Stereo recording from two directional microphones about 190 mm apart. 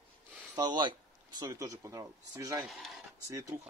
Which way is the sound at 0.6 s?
25° right (ahead or behind).